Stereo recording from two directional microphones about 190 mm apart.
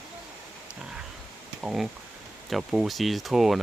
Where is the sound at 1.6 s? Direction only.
5° right (ahead or behind).